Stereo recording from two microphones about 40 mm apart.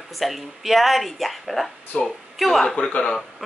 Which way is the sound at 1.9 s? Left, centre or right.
Left.